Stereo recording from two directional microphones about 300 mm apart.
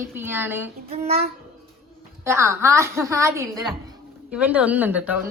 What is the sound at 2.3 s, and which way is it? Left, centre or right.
A woman's voice, centre.